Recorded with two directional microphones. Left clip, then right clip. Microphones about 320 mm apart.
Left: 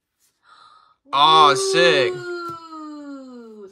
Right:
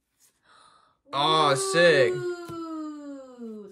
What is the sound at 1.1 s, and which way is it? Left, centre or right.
Speech, centre.